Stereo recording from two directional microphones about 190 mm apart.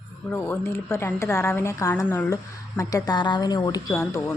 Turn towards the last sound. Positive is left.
turn(degrees=15)  # may be behind; listen again after turning